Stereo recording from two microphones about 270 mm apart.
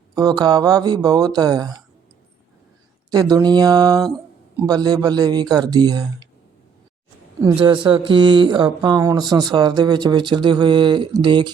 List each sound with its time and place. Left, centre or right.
0.1 s speech: centre
3.1 s speech: centre
7.4 s speech: centre